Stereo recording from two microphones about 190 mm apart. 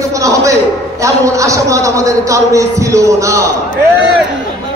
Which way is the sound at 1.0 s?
15° right (ahead or behind).